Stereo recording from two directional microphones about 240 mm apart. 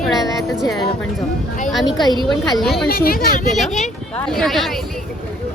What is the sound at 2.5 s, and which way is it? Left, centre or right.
Speech, centre.